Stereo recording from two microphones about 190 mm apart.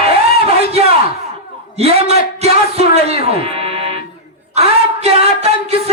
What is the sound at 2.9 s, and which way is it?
Music, 35° right (ahead or behind).